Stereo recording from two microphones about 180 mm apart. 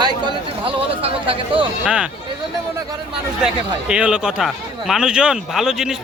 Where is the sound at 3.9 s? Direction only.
5° right (ahead or behind).